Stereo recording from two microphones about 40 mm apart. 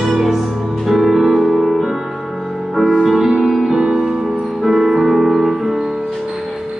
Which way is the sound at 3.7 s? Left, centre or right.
Centre.